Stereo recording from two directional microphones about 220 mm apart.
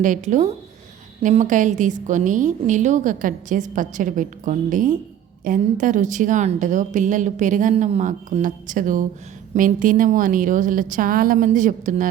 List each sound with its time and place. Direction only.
0.0 s a woman's voice: 35° right (ahead or behind)